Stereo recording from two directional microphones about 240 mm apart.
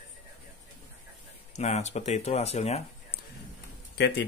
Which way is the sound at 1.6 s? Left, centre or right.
Left.